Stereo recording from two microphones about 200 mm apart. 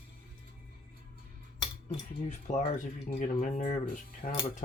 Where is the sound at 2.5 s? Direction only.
35° left (ahead or behind).